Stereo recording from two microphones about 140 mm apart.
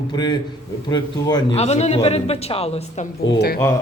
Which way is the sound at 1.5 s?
50° left (ahead or behind).